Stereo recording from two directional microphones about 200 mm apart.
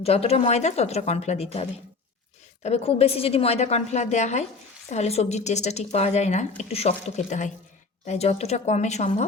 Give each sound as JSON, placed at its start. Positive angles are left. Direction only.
{"t": 0.0, "sound": "a woman's voice", "side_deg": 30}
{"t": 2.6, "sound": "a woman's voice", "side_deg": 30}